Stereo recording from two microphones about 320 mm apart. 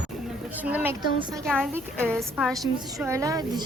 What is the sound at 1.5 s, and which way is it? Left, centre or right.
A woman's voice, centre.